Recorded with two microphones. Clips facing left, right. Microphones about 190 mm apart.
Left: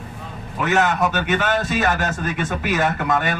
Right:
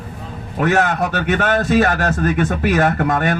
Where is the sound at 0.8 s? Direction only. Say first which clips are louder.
Right 1 dB; 60° right (ahead or behind).